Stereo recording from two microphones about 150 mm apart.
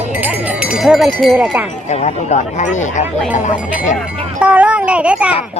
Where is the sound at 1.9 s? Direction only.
50° left (ahead or behind).